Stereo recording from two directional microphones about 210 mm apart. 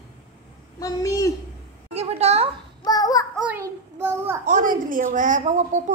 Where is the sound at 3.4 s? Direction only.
10° right (ahead or behind).